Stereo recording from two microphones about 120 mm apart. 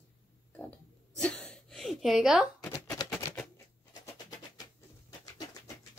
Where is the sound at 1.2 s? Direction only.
10° left (ahead or behind).